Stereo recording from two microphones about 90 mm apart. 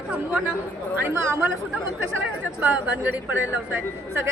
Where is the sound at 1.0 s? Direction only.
30° right (ahead or behind).